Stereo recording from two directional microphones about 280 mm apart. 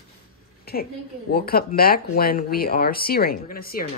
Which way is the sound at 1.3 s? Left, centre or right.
Left.